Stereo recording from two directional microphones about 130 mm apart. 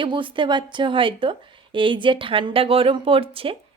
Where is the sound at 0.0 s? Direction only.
40° right (ahead or behind).